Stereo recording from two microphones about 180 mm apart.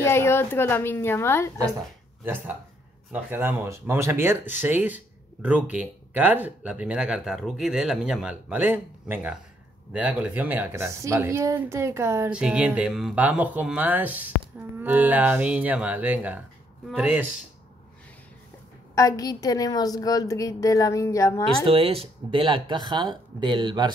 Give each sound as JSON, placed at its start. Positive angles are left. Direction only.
{"t": 0.0, "sound": "a woman's voice", "side_deg": 15}
{"t": 2.2, "sound": "speech", "side_deg": -10}
{"t": 18.9, "sound": "a woman's voice", "side_deg": 20}
{"t": 21.6, "sound": "speech", "side_deg": -30}